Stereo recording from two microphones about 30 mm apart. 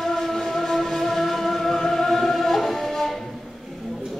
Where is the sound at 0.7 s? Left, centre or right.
Centre.